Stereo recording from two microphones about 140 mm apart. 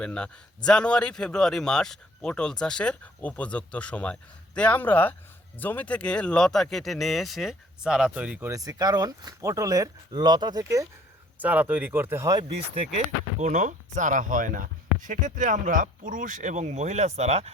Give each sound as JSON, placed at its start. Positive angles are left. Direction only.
{"t": 0.0, "sound": "a man's voice", "side_deg": 5}
{"t": 11.3, "sound": "speech", "side_deg": -10}
{"t": 13.4, "sound": "speech", "side_deg": -60}